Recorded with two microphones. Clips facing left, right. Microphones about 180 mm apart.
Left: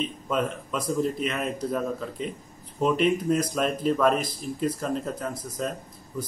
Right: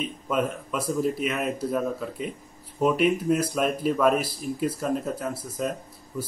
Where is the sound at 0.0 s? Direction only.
5° right (ahead or behind).